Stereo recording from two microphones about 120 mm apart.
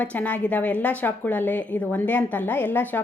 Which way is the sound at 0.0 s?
15° left (ahead or behind).